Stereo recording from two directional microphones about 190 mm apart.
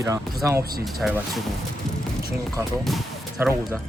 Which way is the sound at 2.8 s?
Centre (ahead or behind).